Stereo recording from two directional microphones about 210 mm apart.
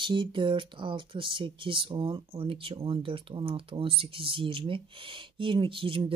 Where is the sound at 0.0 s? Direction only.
25° right (ahead or behind).